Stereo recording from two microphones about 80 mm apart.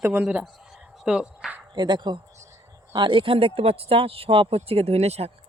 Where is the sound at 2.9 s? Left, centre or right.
Right.